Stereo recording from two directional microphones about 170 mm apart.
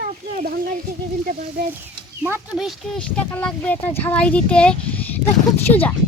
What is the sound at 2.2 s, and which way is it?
Speech, 10° right (ahead or behind).